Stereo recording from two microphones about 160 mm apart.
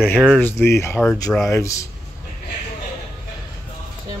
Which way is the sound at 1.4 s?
20° left (ahead or behind).